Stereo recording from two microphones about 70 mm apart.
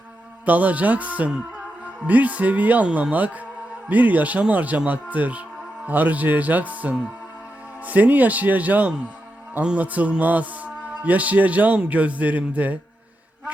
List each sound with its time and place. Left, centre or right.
0.4 s speech: right